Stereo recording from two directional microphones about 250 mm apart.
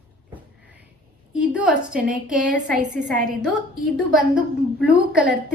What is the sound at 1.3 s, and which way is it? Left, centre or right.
A woman's voice, centre.